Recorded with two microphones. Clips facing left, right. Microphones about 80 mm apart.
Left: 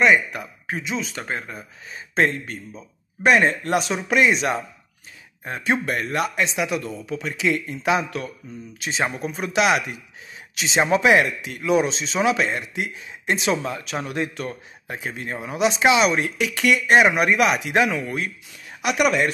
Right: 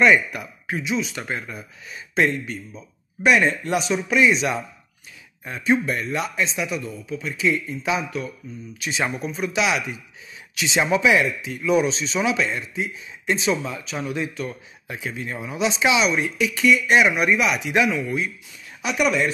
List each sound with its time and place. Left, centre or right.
0.0 s speech: left
7.1 s speech: left
8.7 s speech: left
9.2 s speech: left
10.6 s speech: left
11.0 s speech: left
11.4 s speech: left
11.7 s speech: left